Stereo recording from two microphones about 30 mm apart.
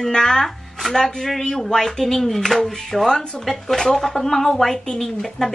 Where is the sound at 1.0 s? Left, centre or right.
Centre.